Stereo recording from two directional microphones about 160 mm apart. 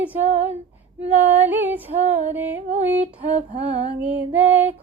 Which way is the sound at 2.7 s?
45° right (ahead or behind).